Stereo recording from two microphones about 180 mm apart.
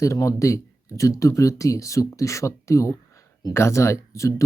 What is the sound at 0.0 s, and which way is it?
Speech, 20° left (ahead or behind).